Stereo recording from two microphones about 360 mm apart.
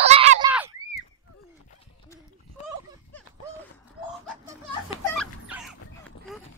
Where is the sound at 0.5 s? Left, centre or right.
Centre.